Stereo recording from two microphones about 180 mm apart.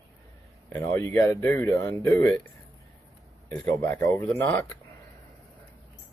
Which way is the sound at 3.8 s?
15° left (ahead or behind).